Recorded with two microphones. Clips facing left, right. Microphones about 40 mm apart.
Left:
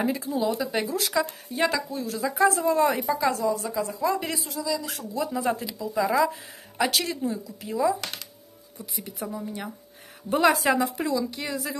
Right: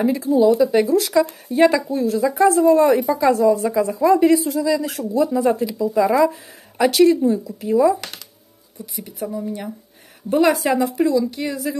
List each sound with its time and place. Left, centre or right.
0.0 s a woman's voice: centre
1.5 s speech: centre
2.0 s a woman's voice: centre
3.2 s speech: centre
3.8 s speech: right
4.6 s speech: right
5.1 s a woman's voice: centre
5.9 s speech: centre
6.8 s speech: centre
8.9 s a woman's voice: centre